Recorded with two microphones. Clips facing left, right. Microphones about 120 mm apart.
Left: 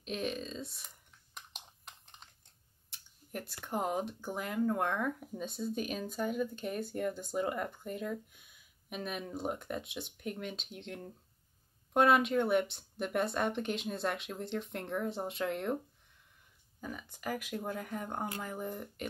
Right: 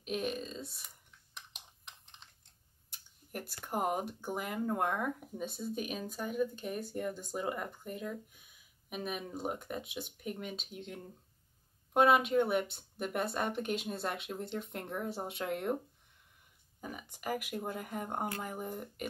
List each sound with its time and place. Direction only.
0.0 s speech: 5° right (ahead or behind)
3.3 s speech: 10° right (ahead or behind)
16.8 s speech: 15° right (ahead or behind)
18.0 s speech: 25° right (ahead or behind)
18.4 s speech: 15° right (ahead or behind)